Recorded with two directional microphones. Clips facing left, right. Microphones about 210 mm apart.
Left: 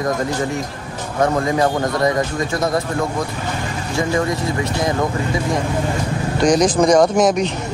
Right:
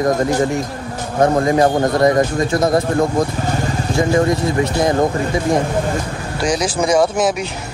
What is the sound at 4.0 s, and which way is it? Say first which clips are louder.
Speech: right 4 dB; 35° right (ahead or behind).